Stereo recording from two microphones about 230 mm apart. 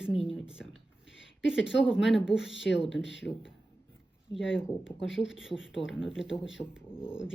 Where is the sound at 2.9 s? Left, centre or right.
Left.